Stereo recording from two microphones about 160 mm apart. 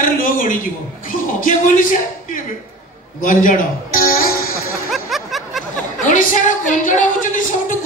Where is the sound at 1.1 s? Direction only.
55° left (ahead or behind).